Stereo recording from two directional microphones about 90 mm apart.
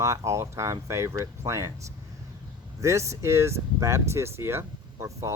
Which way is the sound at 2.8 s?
35° right (ahead or behind).